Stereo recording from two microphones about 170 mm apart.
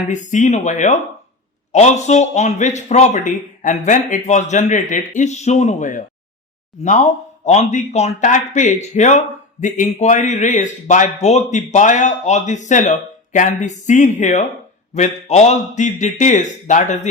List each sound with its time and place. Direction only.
0.1 s speech: 45° left (ahead or behind)